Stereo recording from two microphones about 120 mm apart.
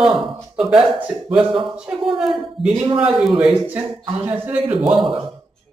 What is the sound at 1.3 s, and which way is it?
Speech, 45° right (ahead or behind).